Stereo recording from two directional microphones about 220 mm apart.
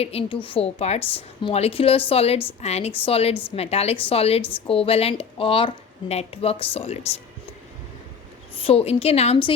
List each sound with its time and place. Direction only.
0.0 s a woman's voice: 25° left (ahead or behind)
8.5 s a woman's voice: 25° left (ahead or behind)